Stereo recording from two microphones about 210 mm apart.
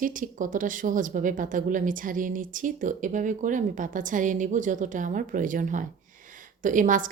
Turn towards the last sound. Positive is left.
turn(degrees=-40)  # may be behind; listen again after turning